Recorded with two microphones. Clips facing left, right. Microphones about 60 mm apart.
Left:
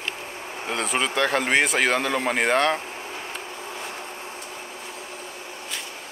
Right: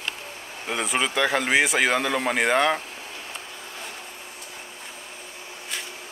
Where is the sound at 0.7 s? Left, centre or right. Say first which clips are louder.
Even; centre.